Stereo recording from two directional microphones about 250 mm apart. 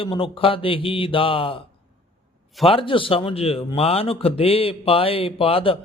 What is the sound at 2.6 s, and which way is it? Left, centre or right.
A man's voice, left.